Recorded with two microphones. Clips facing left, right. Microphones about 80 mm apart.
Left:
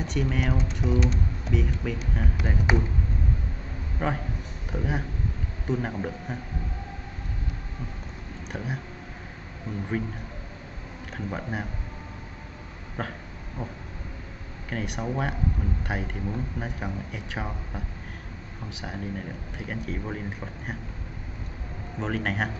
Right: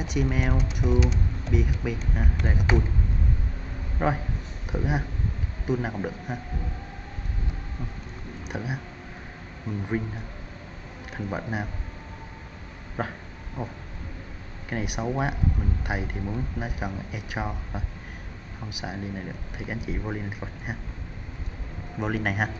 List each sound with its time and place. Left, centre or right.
0.0 s speech: centre
2.7 s speech: centre
4.0 s speech: centre
8.5 s speech: centre
11.1 s speech: centre
13.0 s speech: centre
22.0 s speech: centre